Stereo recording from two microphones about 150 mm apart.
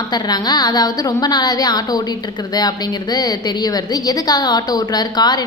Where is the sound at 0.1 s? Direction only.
25° left (ahead or behind).